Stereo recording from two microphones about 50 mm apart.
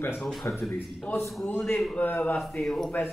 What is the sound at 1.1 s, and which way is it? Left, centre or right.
A man's voice, left.